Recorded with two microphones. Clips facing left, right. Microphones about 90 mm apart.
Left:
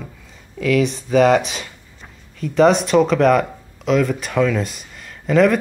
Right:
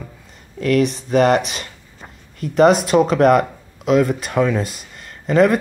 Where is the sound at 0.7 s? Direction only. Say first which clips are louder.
Even; centre (ahead or behind).